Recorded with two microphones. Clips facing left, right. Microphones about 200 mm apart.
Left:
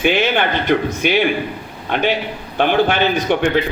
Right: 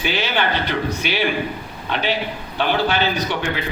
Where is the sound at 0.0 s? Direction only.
55° left (ahead or behind).